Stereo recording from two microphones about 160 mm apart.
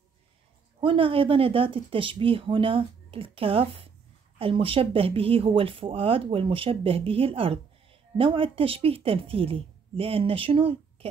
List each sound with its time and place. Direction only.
0.7 s speech: 35° right (ahead or behind)